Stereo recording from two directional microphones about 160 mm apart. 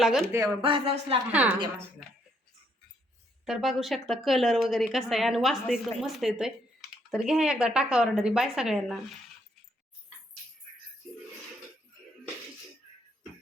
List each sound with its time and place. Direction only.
0.0 s speech: centre (ahead or behind)
0.3 s speech: 20° right (ahead or behind)
0.6 s speech: 35° right (ahead or behind)
1.3 s speech: 10° right (ahead or behind)
3.4 s speech: centre (ahead or behind)